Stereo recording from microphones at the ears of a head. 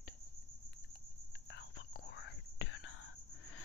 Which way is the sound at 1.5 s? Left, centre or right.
Left.